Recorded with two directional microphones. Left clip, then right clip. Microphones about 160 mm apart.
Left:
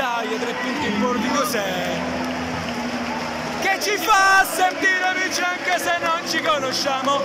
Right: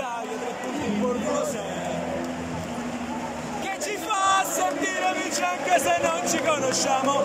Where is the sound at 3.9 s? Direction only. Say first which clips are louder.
Left 7 dB; centre (ahead or behind).